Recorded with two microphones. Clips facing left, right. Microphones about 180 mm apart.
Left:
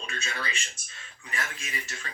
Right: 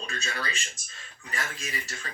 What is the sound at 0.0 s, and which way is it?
Speech, 35° right (ahead or behind).